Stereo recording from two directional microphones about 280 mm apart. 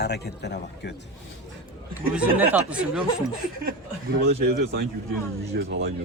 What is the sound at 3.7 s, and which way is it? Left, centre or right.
A man's voice, right.